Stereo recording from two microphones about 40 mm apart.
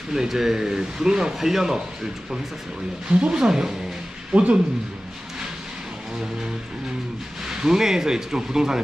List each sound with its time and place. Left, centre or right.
0.1 s speech: centre
3.1 s speech: right
4.3 s speech: right
7.4 s speech: centre